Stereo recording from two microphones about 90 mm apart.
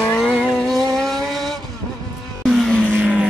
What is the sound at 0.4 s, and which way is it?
Vehicle, 5° left (ahead or behind).